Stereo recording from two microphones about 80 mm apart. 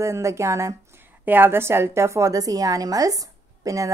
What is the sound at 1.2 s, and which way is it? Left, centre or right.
A woman's voice, right.